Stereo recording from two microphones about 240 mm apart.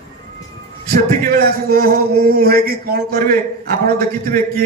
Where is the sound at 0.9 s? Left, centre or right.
Right.